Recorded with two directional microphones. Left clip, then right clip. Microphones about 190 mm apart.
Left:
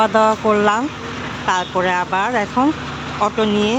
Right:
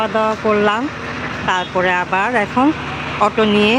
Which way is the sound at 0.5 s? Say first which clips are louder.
Even; 5° left (ahead or behind).